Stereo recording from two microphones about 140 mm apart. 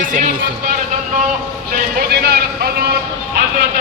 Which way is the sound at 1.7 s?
90° right.